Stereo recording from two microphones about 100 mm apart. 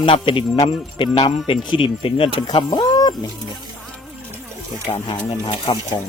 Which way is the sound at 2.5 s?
50° left (ahead or behind).